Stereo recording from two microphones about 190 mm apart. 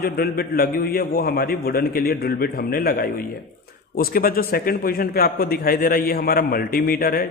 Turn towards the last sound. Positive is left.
turn(degrees=50)  # may be behind; listen again after turning